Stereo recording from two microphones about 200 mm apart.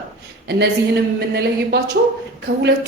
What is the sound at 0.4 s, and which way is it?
A woman's voice, 55° right (ahead or behind).